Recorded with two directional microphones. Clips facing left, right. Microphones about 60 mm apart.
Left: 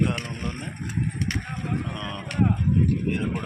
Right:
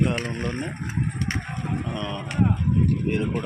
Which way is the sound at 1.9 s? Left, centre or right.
Centre.